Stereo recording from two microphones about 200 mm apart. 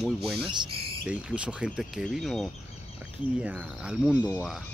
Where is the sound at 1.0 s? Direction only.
5° right (ahead or behind).